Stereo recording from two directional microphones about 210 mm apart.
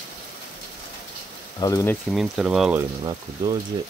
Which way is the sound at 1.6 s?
15° left (ahead or behind).